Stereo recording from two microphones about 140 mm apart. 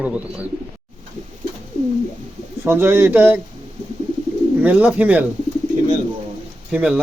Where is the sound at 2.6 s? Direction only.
15° right (ahead or behind).